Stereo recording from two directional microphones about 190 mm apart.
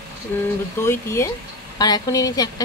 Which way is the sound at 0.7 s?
15° left (ahead or behind).